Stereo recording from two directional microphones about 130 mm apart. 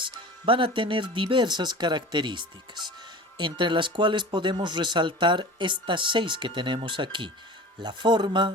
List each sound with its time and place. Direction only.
0.0 s speech: 40° right (ahead or behind)